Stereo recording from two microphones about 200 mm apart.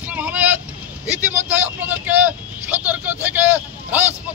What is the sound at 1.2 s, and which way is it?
Vehicle, 5° right (ahead or behind).